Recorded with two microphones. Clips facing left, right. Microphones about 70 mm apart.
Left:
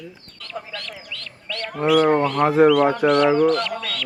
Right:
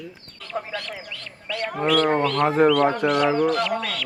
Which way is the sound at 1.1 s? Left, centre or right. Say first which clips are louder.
Even; centre.